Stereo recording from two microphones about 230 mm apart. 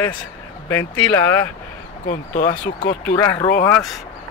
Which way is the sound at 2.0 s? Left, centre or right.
Left.